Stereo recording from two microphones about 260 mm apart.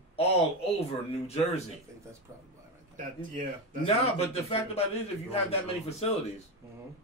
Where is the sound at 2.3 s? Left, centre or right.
Centre.